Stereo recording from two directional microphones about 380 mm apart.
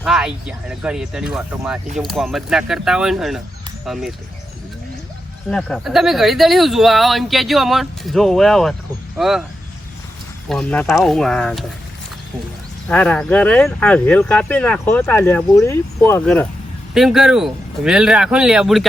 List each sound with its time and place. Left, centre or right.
0.0 s speech: centre
5.5 s speech: centre
10.5 s speech: centre
12.9 s speech: centre